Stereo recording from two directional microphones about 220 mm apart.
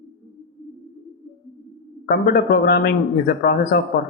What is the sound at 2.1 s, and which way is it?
Speech, 45° left (ahead or behind).